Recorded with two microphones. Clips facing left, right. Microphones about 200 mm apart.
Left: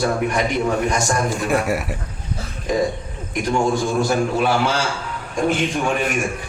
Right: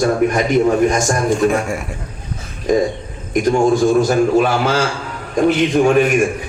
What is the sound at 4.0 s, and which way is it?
Speech, 45° right (ahead or behind).